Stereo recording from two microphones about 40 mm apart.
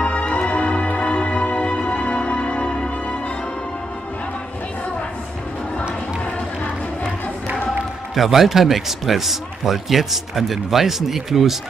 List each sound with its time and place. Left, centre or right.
0.0 s music: left
8.1 s speech: centre